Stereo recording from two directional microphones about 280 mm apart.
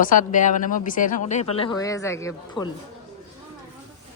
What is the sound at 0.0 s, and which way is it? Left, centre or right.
Speech, left.